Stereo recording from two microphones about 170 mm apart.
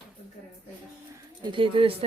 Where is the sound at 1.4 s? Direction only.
30° right (ahead or behind).